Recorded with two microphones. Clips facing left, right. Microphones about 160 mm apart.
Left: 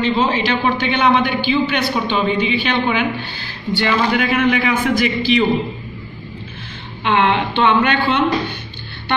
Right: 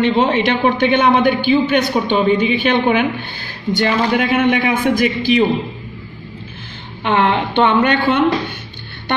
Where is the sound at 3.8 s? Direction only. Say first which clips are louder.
Right 1 dB; 35° right (ahead or behind).